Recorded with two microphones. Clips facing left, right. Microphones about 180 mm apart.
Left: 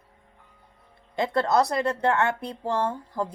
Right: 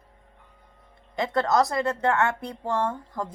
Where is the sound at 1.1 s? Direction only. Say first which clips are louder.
Left 1 dB; 30° left (ahead or behind).